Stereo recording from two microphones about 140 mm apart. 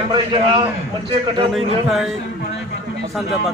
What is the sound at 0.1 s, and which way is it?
Speech, 35° right (ahead or behind).